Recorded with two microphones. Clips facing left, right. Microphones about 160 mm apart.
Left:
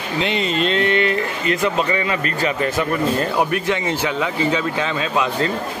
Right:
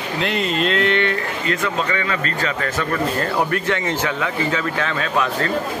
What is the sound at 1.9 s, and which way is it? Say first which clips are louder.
Speech: left 2 dB; 20° left (ahead or behind).